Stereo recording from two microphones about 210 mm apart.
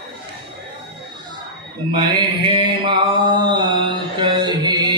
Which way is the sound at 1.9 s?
20° right (ahead or behind).